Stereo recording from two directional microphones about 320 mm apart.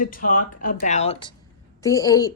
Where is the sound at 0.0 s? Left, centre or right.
Left.